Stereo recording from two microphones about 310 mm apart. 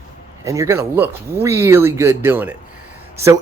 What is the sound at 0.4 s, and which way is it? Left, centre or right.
Speech, centre.